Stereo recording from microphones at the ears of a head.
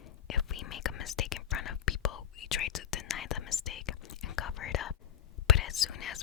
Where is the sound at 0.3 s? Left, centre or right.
Left.